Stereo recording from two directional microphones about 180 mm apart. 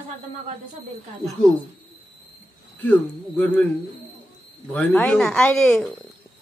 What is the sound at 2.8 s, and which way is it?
Speech, 10° left (ahead or behind).